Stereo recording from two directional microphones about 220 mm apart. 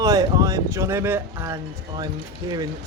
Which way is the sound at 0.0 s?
15° right (ahead or behind).